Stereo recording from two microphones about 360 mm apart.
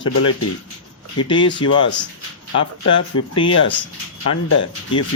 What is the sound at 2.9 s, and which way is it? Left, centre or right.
Speech, centre.